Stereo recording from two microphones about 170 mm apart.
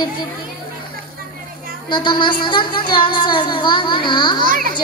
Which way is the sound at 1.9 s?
25° left (ahead or behind).